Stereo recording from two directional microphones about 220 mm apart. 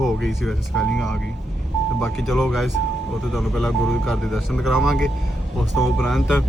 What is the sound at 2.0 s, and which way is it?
Speech, centre (ahead or behind).